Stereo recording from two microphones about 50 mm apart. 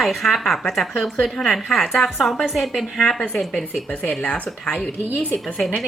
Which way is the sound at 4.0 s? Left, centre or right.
Left.